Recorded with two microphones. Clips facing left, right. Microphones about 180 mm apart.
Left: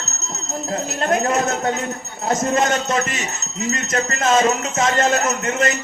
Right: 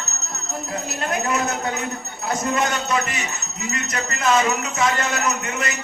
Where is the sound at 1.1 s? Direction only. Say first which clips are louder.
Left 5 dB; 45° left (ahead or behind).